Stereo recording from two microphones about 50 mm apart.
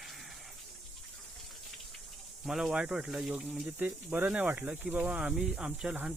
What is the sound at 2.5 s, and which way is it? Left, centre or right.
Speech, centre.